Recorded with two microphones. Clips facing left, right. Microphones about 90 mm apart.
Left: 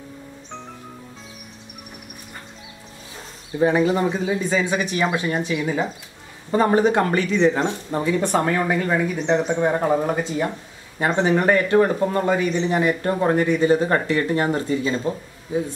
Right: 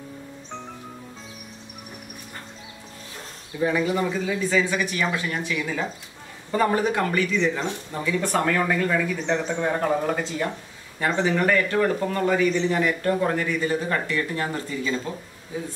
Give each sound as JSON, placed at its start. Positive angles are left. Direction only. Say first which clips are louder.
{"t": 3.5, "sound": "a man's voice", "louder": "left 5 dB", "side_deg": 35}
{"t": 8.2, "sound": "a man's voice", "louder": "right 1 dB", "side_deg": 25}
{"t": 11.1, "sound": "a man's voice", "louder": "left 3 dB", "side_deg": 30}